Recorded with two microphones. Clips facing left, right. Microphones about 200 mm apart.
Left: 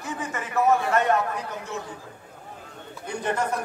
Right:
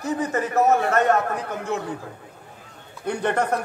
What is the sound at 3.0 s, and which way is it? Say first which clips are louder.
Speech: right 4 dB; 65° right (ahead or behind).